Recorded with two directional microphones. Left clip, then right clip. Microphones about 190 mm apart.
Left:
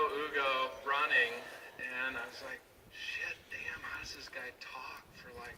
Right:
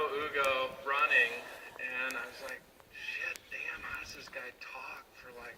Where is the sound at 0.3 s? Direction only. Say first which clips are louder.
Right 3 dB; 35° left (ahead or behind).